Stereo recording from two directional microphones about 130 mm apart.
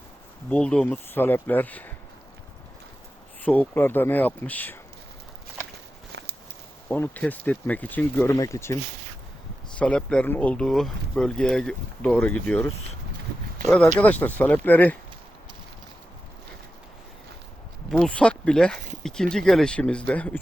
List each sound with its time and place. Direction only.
0.5 s speech: 5° left (ahead or behind)
3.4 s speech: 10° left (ahead or behind)
6.8 s speech: 15° left (ahead or behind)
9.7 s speech: 10° left (ahead or behind)
14.0 s speech: 15° left (ahead or behind)
17.9 s speech: 5° left (ahead or behind)